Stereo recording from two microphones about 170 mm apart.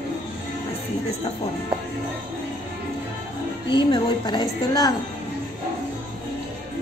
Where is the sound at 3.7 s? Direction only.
25° left (ahead or behind).